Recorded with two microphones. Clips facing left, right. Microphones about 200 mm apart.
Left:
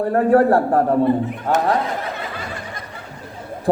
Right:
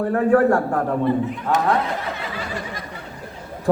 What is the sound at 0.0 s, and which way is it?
Speech, 35° left (ahead or behind).